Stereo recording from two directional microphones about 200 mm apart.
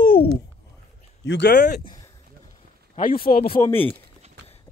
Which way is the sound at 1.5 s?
45° left (ahead or behind).